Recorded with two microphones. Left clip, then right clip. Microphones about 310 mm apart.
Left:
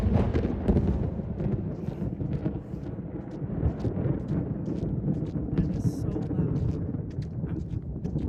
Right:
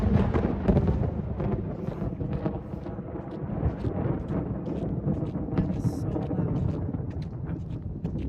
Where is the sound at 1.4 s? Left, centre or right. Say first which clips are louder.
Right 2 dB; centre.